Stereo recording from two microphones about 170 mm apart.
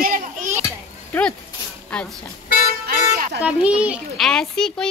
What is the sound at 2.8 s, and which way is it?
Music, 65° right (ahead or behind).